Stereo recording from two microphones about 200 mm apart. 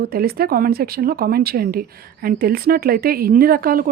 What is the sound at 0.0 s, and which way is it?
Speech, 50° right (ahead or behind).